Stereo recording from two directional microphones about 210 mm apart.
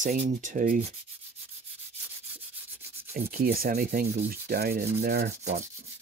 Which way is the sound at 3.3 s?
45° right (ahead or behind).